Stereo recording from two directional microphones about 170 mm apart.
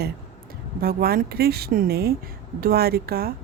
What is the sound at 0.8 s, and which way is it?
Speech, 60° right (ahead or behind).